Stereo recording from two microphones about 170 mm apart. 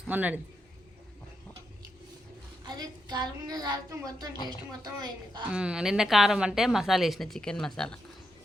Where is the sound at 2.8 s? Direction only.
25° right (ahead or behind).